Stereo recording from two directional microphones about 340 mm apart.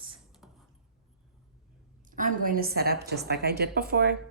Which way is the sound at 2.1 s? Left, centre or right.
Right.